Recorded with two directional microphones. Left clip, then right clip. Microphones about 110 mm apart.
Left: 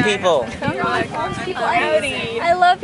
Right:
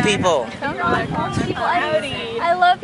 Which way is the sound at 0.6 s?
35° left (ahead or behind).